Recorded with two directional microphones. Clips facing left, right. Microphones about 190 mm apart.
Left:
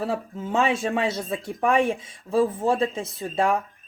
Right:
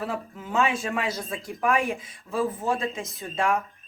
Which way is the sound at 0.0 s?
30° left (ahead or behind).